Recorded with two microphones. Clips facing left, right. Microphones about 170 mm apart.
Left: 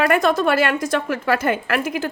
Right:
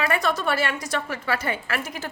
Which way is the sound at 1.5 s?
80° left.